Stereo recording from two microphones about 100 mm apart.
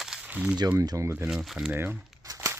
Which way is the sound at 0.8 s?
35° right (ahead or behind).